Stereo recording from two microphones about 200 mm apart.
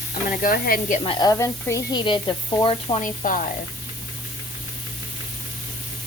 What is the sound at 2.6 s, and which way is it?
Sizzle, 35° left (ahead or behind).